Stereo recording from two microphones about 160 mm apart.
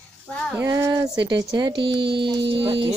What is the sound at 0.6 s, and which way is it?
Speech, 15° right (ahead or behind).